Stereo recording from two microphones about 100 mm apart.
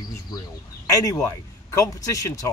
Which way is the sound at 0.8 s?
35° left (ahead or behind).